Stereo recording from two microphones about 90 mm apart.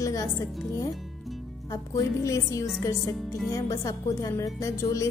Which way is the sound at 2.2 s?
35° left (ahead or behind).